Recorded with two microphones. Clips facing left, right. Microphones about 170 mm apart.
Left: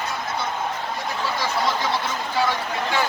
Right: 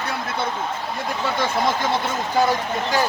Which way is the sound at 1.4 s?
50° right (ahead or behind).